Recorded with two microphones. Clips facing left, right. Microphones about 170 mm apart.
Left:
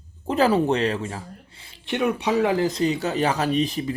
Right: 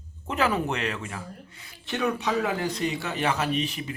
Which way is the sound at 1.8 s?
15° left (ahead or behind).